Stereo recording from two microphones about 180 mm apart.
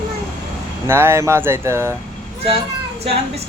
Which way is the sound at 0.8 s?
15° right (ahead or behind).